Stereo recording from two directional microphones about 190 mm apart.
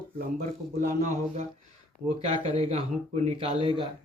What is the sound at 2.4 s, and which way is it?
A man's voice, 30° right (ahead or behind).